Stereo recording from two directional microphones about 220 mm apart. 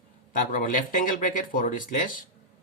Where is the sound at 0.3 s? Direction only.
35° left (ahead or behind).